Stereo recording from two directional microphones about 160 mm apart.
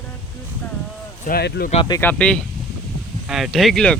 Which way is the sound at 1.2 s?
70° left (ahead or behind).